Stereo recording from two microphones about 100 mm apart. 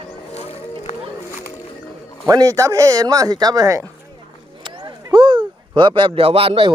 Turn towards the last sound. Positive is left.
turn(degrees=-60)  # may be behind; listen again after turning